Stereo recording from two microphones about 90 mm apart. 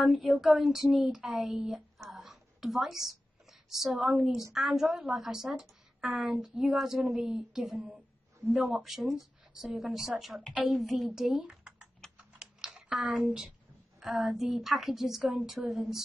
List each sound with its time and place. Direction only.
0.0 s a woman's voice: centre (ahead or behind)
12.4 s typing: 10° right (ahead or behind)
14.2 s a woman's voice: 5° right (ahead or behind)
15.2 s speech: 15° right (ahead or behind)